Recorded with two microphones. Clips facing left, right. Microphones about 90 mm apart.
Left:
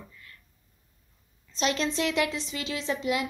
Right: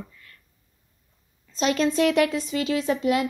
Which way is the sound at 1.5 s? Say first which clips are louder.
Right 5 dB; 45° right (ahead or behind).